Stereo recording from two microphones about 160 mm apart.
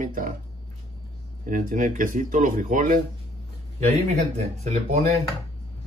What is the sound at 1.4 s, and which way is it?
Speech, 55° right (ahead or behind).